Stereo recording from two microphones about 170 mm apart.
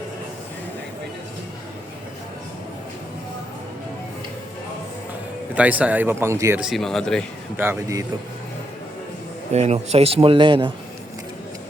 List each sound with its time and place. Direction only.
5.5 s speech: 10° right (ahead or behind)
6.6 s speech: centre (ahead or behind)
7.5 s speech: 15° right (ahead or behind)
9.5 s speech: 40° right (ahead or behind)